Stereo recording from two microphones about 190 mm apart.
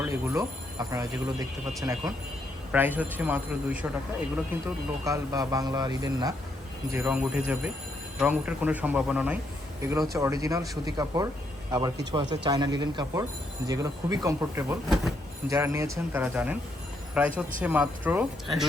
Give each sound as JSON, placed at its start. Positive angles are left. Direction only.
{"t": 0.0, "sound": "speech", "side_deg": -15}
{"t": 5.0, "sound": "speech", "side_deg": -20}
{"t": 6.9, "sound": "speech", "side_deg": -5}
{"t": 10.2, "sound": "speech", "side_deg": -15}